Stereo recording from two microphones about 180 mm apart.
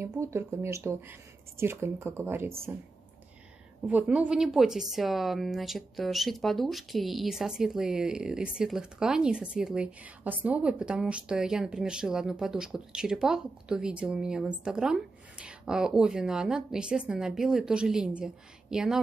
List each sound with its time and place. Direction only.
0.0 s speech: 15° right (ahead or behind)
3.8 s speech: 5° right (ahead or behind)